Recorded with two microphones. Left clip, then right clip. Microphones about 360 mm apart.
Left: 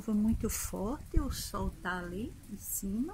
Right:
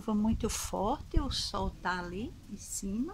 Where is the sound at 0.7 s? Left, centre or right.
Right.